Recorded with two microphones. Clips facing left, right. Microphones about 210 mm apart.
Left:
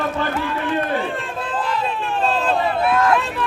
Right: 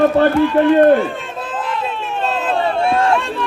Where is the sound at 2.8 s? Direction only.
30° right (ahead or behind).